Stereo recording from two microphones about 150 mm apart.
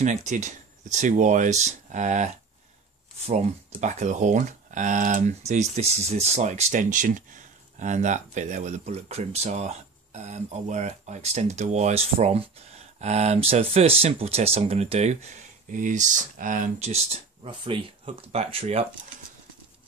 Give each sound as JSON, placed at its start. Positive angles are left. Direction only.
{"t": 0.0, "sound": "speech", "side_deg": -50}
{"t": 15.7, "sound": "speech", "side_deg": -55}
{"t": 16.9, "sound": "speech", "side_deg": -40}